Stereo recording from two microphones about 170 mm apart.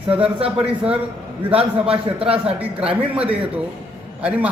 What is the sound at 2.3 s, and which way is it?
A man's voice, 10° right (ahead or behind).